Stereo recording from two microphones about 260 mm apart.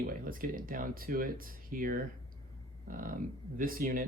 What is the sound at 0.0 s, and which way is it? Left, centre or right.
Speech, right.